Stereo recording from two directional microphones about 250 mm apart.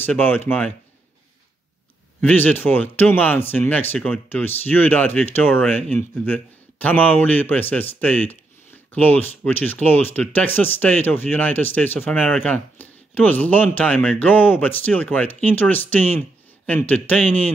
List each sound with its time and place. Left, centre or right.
0.0 s speech: centre
2.2 s speech: centre